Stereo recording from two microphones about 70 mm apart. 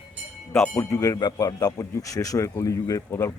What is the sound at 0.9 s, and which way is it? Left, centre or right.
A man's voice, left.